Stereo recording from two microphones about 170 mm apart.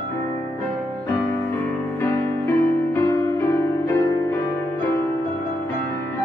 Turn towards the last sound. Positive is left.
turn(degrees=15)  # may be behind; listen again after turning